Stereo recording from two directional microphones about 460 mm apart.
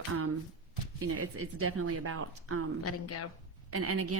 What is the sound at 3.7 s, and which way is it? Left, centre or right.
Speech, right.